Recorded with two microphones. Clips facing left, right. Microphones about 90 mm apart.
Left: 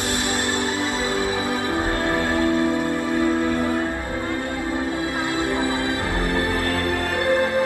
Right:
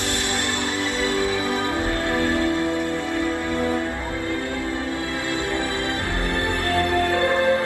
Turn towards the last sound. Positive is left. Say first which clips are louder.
# left 2 dB
turn(degrees=25)  # may be behind; listen again after turning